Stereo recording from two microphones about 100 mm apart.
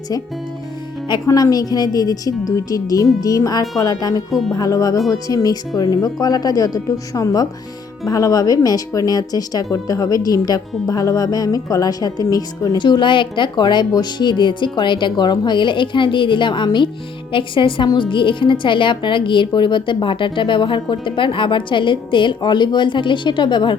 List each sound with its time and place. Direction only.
1.3 s speech: 35° left (ahead or behind)
4.3 s speech: centre (ahead or behind)
4.5 s speech: 35° left (ahead or behind)
12.8 s a woman's voice: 50° left (ahead or behind)